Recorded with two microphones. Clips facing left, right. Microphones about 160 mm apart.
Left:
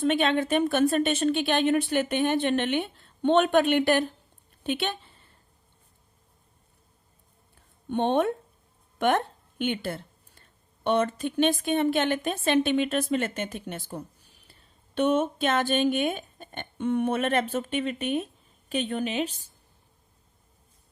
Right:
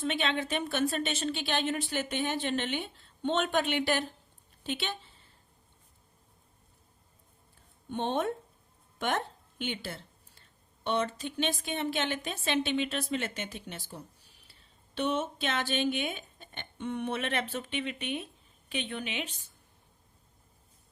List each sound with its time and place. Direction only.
0.0 s a woman's voice: 50° left (ahead or behind)
7.9 s a woman's voice: 60° left (ahead or behind)
9.0 s a sound: 55° left (ahead or behind)
10.8 s speech: 55° left (ahead or behind); by 19.5 s 35° left (ahead or behind)